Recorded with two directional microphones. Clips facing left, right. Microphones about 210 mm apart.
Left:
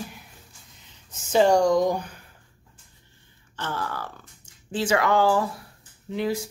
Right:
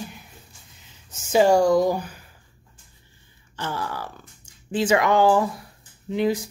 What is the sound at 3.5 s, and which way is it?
Speech, 10° right (ahead or behind).